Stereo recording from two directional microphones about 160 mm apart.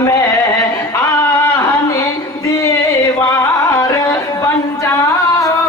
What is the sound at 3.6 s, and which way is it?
Music, 20° left (ahead or behind).